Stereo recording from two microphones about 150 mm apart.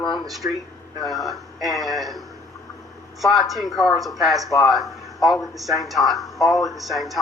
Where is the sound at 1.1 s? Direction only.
Centre (ahead or behind).